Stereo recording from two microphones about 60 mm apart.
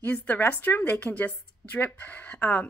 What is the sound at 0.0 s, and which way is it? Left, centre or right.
A woman's voice, left.